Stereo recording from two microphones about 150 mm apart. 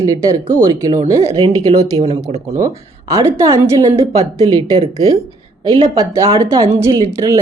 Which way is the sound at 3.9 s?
40° right (ahead or behind).